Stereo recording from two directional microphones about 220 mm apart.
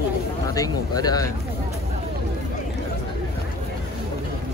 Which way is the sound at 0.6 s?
15° left (ahead or behind).